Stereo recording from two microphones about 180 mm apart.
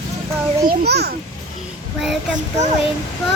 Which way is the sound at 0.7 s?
60° right (ahead or behind).